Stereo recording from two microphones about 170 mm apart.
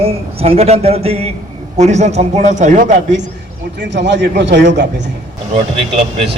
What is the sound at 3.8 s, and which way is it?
A man's voice, 90° right.